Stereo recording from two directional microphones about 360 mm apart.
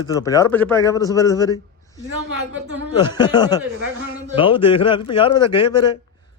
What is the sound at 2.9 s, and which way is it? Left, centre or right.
Speech, centre.